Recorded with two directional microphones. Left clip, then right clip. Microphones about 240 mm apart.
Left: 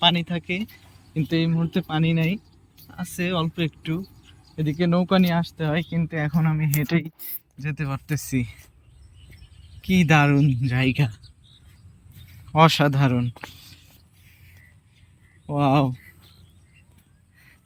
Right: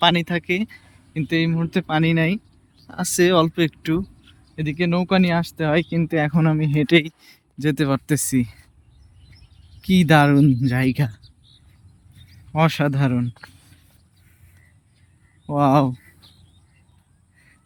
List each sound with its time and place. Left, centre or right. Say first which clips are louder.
0.0 s speech: right 3 dB; centre
9.8 s speech: right 3 dB; right
12.1 s a sound: left 3 dB; centre
15.4 s speech: right 4 dB; centre